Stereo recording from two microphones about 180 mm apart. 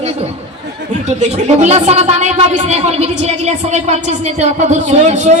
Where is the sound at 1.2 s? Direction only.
40° right (ahead or behind).